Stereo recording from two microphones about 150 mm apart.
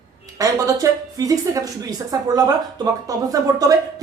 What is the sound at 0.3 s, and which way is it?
Speech, 25° right (ahead or behind).